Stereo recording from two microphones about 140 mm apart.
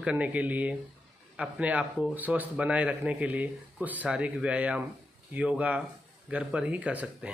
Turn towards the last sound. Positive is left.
turn(degrees=-10)  # may be behind; listen again after turning